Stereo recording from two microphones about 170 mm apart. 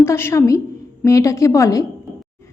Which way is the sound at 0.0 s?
15° left (ahead or behind).